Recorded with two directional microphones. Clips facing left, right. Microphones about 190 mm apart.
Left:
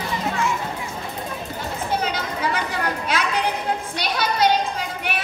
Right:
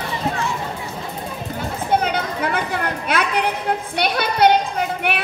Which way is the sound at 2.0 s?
55° right (ahead or behind).